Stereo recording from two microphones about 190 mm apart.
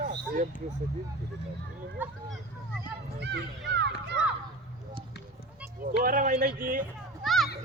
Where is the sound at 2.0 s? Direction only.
10° right (ahead or behind).